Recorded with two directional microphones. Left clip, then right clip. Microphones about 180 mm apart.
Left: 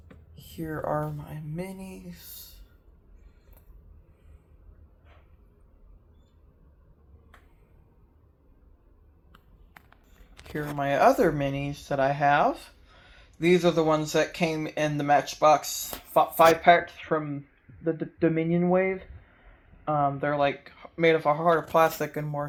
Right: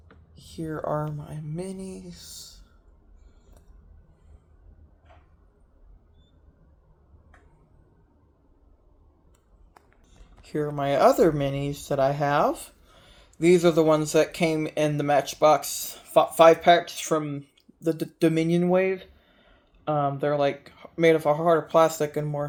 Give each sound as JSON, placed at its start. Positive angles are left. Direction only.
{"t": 0.6, "sound": "speech", "side_deg": -5}
{"t": 1.2, "sound": "a sound", "side_deg": -25}
{"t": 10.5, "sound": "speech", "side_deg": -45}
{"t": 15.8, "sound": "speech", "side_deg": -50}
{"t": 20.3, "sound": "speech", "side_deg": -40}